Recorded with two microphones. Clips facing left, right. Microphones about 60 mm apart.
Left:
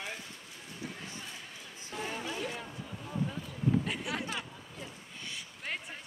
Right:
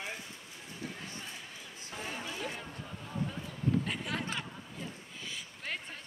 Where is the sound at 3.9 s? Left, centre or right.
Centre.